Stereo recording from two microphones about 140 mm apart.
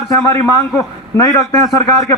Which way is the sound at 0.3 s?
20° left (ahead or behind).